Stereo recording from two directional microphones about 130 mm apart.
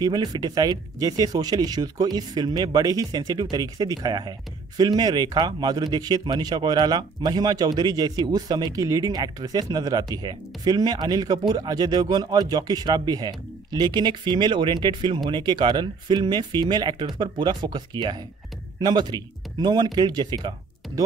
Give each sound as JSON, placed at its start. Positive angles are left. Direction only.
{"t": 0.0, "sound": "speech", "side_deg": -30}